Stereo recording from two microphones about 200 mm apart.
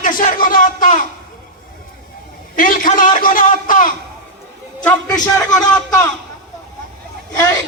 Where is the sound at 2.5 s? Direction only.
45° left (ahead or behind).